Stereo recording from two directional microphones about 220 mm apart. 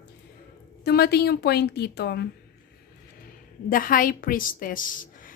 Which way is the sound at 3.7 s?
40° left (ahead or behind).